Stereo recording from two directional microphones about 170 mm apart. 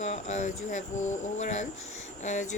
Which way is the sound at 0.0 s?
40° left (ahead or behind).